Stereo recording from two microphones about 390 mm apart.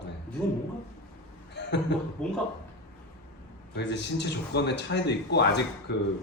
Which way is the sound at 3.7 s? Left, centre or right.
Left.